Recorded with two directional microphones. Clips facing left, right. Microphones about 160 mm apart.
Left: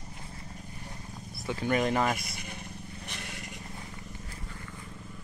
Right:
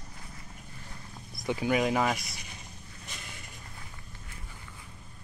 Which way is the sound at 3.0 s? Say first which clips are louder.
Left 2 dB; 65° left (ahead or behind).